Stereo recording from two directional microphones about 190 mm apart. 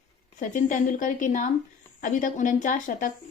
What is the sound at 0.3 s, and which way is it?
Speech, 45° left (ahead or behind).